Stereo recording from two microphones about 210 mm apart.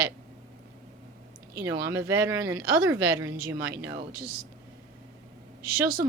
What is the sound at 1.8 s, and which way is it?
Speech, 10° right (ahead or behind).